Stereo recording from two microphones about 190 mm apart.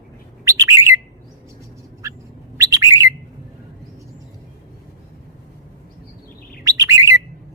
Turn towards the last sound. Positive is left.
turn(degrees=-15)  # may be behind; listen again after turning